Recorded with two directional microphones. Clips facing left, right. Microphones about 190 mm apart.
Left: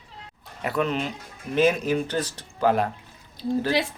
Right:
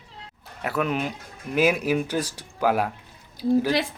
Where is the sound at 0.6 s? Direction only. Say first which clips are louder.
Even; 5° right (ahead or behind).